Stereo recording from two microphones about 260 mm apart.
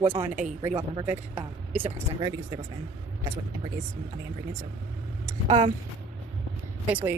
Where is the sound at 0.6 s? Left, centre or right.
Centre.